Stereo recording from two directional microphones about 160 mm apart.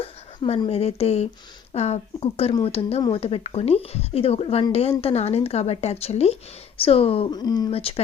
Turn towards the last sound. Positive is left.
turn(degrees=35)  # may be behind; listen again after turning